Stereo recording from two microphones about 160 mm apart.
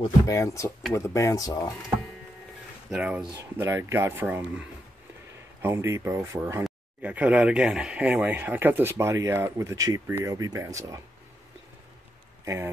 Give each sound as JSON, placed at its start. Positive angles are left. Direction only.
{"t": 0.0, "sound": "speech", "side_deg": 20}
{"t": 2.9, "sound": "speech", "side_deg": -5}